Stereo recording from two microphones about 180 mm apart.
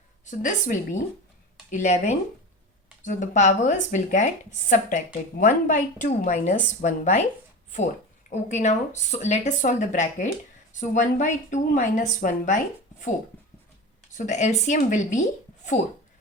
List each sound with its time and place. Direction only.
0.3 s speech: 45° left (ahead or behind)
8.3 s speech: 40° left (ahead or behind)
14.2 s speech: 40° left (ahead or behind)